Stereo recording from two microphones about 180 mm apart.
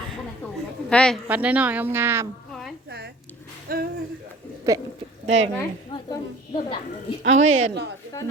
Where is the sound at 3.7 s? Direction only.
55° right (ahead or behind).